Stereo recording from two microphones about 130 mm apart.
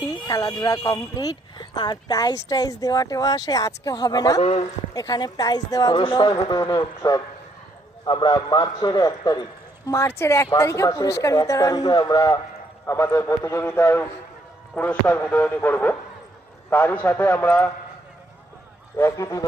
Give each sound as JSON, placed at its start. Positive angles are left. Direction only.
{"t": 0.3, "sound": "a man's voice", "side_deg": 30}
{"t": 4.4, "sound": "a man's voice", "side_deg": 55}
{"t": 4.9, "sound": "a man's voice", "side_deg": 30}
{"t": 12.8, "sound": "a man's voice", "side_deg": 20}
{"t": 18.9, "sound": "a man's voice", "side_deg": 20}